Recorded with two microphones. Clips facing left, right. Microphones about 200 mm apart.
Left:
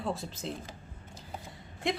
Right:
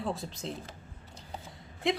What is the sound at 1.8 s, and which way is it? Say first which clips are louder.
Speech: right 2 dB; centre (ahead or behind).